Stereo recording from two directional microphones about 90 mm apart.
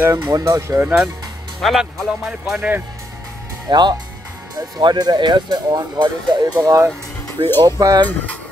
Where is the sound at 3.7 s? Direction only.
55° right (ahead or behind).